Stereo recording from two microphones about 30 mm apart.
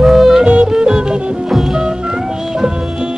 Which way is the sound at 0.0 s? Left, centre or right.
Centre.